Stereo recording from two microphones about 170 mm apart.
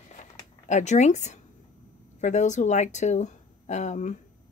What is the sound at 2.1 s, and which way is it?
Speech, 45° left (ahead or behind).